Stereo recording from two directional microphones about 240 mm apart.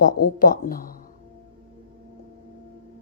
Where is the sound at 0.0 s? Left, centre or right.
Left.